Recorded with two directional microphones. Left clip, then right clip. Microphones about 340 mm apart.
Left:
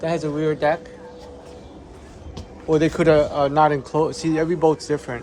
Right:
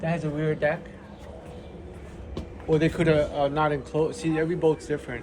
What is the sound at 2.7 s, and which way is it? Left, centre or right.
Speech, centre.